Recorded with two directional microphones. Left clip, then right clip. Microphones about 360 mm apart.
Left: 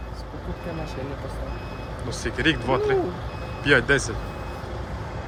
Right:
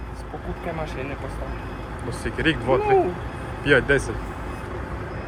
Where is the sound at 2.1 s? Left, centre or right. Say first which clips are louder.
Even; centre.